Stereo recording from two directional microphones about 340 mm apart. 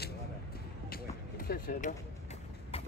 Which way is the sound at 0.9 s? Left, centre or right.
Left.